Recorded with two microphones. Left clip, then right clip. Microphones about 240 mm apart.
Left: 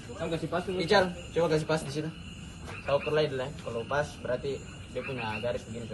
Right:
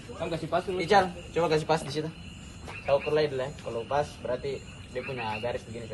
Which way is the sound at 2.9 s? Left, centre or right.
Right.